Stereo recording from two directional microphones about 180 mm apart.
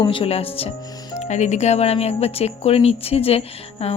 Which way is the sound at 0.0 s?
30° left (ahead or behind).